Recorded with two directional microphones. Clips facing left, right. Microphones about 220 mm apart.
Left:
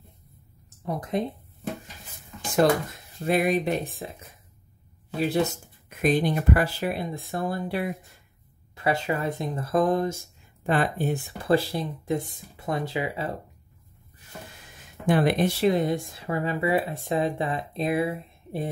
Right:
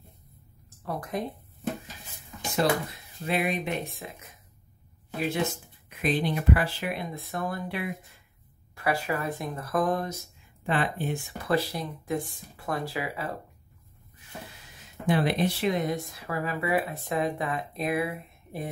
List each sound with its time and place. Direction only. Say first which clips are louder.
0.7 s speech: left 3 dB; 20° left (ahead or behind)
2.5 s speech: left 5 dB; 45° left (ahead or behind)
5.3 s speech: left 4 dB; 40° left (ahead or behind)
8.7 s speech: left 3 dB; 20° left (ahead or behind)
10.6 s speech: left 4 dB; 40° left (ahead or behind); by 13.4 s 25° left (ahead or behind)
15.0 s speech: left 3 dB; 50° left (ahead or behind)
15.6 s speech: left 5 dB; 30° left (ahead or behind)